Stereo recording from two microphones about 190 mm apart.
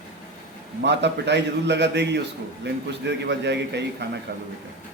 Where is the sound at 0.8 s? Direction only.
65° right (ahead or behind).